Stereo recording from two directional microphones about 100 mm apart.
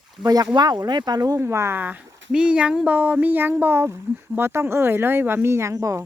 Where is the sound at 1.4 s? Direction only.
25° right (ahead or behind).